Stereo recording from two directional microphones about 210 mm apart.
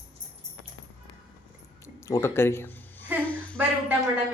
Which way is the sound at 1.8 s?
15° left (ahead or behind).